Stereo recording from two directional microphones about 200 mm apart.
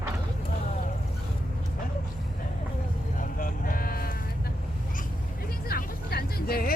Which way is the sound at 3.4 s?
45° left (ahead or behind).